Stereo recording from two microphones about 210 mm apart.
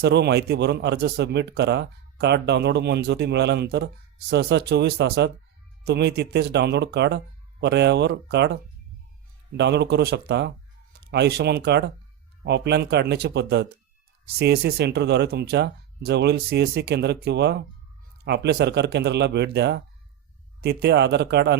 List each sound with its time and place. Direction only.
0.0 s a man's voice: 55° right (ahead or behind)